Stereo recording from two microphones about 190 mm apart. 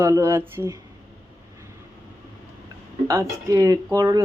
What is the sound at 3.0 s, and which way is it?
A man's voice, 15° right (ahead or behind).